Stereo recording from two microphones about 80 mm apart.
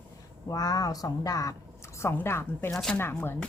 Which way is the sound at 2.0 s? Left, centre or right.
Left.